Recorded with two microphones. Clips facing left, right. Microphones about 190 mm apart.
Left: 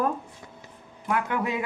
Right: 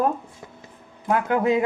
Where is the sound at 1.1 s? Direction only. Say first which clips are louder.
Right 7 dB; 30° right (ahead or behind).